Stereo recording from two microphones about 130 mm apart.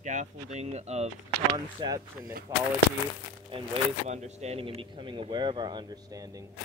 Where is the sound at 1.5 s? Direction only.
30° right (ahead or behind).